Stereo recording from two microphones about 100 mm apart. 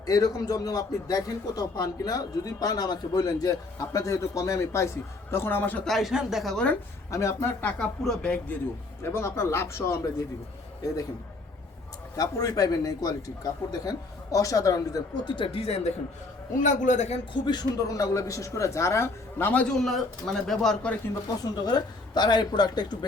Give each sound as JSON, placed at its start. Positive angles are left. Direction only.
{"t": 0.0, "sound": "a man's voice", "side_deg": 35}
{"t": 5.8, "sound": "speech", "side_deg": 0}
{"t": 7.1, "sound": "a man's voice", "side_deg": 30}
{"t": 7.6, "sound": "speech", "side_deg": 10}
{"t": 9.0, "sound": "speech", "side_deg": 25}
{"t": 12.1, "sound": "a man's voice", "side_deg": 35}
{"t": 17.4, "sound": "a man's voice", "side_deg": 40}
{"t": 19.8, "sound": "speech", "side_deg": 5}
{"t": 21.4, "sound": "a man's voice", "side_deg": 40}